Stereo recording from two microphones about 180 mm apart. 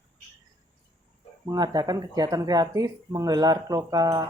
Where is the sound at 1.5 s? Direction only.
20° right (ahead or behind).